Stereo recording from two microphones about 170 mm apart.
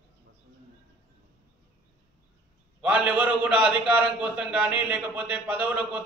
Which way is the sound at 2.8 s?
5° right (ahead or behind).